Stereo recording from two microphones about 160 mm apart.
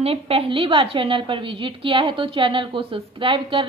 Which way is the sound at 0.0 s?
35° right (ahead or behind).